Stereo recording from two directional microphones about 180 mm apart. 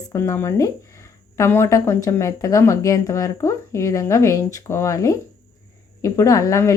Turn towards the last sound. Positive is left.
turn(degrees=15)  # may be behind; listen again after turning